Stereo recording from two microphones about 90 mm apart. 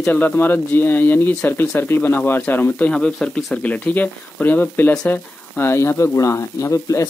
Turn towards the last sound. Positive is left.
turn(degrees=35)  # may be behind; listen again after turning